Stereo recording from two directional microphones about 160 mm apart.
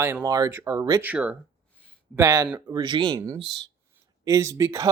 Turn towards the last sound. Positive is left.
turn(degrees=-20)  # may be behind; listen again after turning